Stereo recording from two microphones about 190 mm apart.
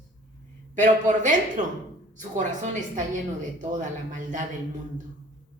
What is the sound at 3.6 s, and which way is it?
Speech, 40° right (ahead or behind).